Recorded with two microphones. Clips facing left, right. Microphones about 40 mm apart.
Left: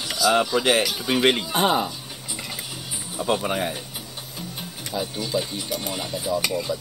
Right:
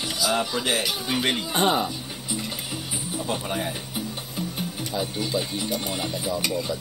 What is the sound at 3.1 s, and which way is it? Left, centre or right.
Speech, left.